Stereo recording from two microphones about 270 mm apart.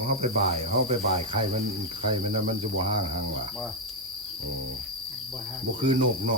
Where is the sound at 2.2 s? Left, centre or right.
Right.